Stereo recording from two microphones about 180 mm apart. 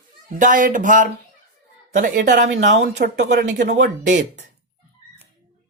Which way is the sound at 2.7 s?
70° right (ahead or behind).